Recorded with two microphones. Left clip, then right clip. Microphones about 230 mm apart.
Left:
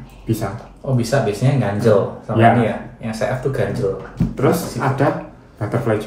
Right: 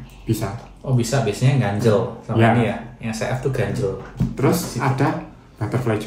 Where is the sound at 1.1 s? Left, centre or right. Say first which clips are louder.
Left 4 dB; right.